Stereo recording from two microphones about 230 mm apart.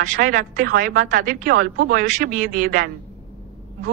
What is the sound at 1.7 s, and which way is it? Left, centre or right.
Speech, right.